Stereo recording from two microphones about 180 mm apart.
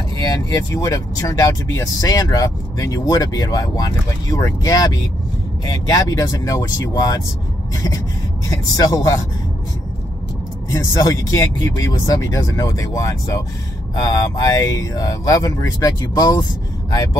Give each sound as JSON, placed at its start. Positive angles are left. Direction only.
{"t": 0.2, "sound": "speech", "side_deg": 20}
{"t": 7.7, "sound": "a sound", "side_deg": 20}
{"t": 8.5, "sound": "speech", "side_deg": 20}
{"t": 10.7, "sound": "speech", "side_deg": 20}